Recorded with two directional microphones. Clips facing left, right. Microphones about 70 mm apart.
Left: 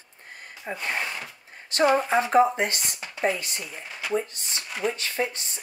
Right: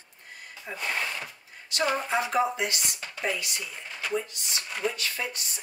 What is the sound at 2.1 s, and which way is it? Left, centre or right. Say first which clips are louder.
Speech: left 6 dB; left.